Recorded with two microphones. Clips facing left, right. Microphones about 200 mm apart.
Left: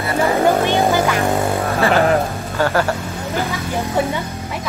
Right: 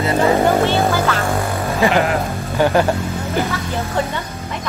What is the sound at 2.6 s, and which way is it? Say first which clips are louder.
Speech: right 3 dB; 15° right (ahead or behind).